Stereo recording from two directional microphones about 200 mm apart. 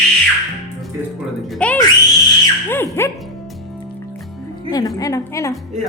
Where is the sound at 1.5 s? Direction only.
5° left (ahead or behind).